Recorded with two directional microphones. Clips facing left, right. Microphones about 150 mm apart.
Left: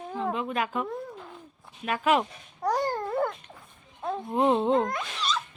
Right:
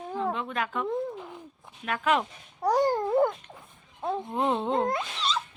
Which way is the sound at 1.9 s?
10° left (ahead or behind).